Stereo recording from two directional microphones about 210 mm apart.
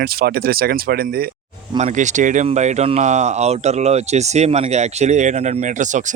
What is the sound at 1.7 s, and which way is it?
Speech, 35° right (ahead or behind).